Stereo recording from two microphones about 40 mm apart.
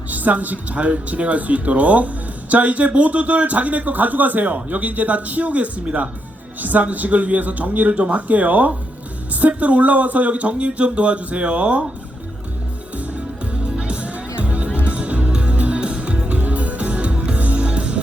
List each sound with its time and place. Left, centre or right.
0.1 s speech: right
13.5 s music: right
14.7 s music: left
14.9 s music: right